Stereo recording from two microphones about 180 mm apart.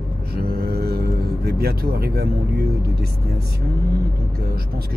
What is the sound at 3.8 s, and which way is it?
Speech, 60° right (ahead or behind).